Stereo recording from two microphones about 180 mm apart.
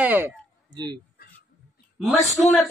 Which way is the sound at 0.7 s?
25° right (ahead or behind).